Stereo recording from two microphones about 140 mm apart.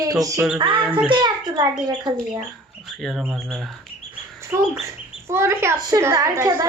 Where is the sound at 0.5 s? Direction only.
35° right (ahead or behind).